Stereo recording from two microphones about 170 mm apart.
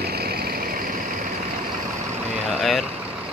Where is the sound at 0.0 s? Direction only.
65° right (ahead or behind).